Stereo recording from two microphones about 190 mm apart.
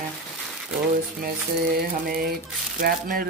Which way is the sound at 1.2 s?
55° right (ahead or behind).